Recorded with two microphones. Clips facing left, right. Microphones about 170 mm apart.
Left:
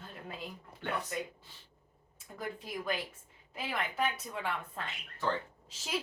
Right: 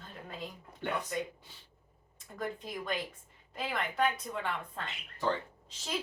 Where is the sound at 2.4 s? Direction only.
5° left (ahead or behind).